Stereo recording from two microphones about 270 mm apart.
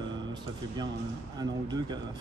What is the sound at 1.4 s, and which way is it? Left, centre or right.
Speech, centre.